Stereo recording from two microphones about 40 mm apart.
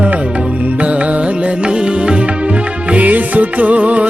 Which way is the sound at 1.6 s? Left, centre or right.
Right.